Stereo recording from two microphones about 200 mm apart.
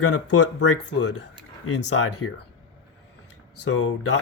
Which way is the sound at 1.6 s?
90° left.